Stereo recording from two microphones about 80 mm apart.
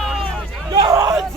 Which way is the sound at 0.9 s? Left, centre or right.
Right.